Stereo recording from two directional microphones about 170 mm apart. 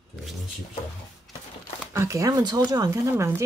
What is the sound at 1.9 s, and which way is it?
Speech, 20° right (ahead or behind).